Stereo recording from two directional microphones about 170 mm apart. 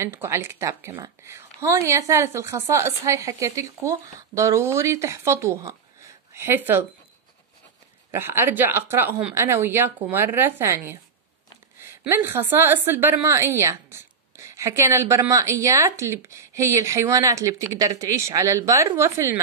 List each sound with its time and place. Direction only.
0.0 s a woman's voice: 15° right (ahead or behind)
8.1 s a woman's voice: 15° right (ahead or behind)
11.8 s a woman's voice: 15° right (ahead or behind)